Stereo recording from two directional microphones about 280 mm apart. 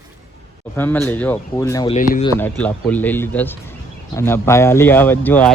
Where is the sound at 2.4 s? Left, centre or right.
Centre.